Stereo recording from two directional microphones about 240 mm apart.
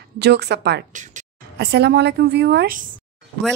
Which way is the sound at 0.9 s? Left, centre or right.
Right.